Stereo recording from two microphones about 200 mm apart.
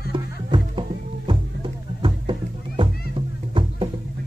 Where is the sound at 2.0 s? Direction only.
25° right (ahead or behind).